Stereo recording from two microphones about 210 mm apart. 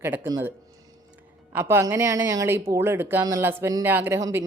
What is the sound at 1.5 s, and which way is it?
Speech, 10° right (ahead or behind).